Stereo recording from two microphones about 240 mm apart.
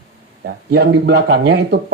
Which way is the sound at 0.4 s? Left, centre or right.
Right.